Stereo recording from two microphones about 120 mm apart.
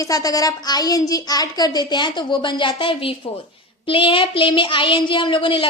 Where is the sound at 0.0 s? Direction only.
30° left (ahead or behind).